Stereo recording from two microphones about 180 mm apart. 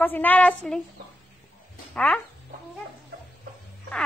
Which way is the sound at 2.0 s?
5° left (ahead or behind).